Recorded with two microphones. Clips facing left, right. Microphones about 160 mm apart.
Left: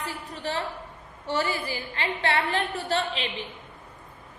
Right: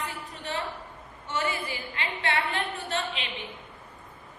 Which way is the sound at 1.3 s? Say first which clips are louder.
Left 3 dB; 35° left (ahead or behind).